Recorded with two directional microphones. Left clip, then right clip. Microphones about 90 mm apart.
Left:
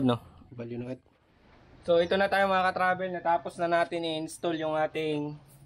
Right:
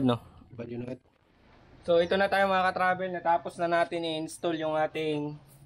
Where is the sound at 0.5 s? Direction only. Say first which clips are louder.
Even; 45° right (ahead or behind).